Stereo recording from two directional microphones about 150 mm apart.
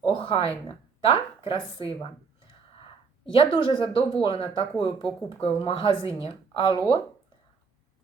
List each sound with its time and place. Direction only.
0.0 s speech: 35° left (ahead or behind)
3.3 s speech: 35° left (ahead or behind)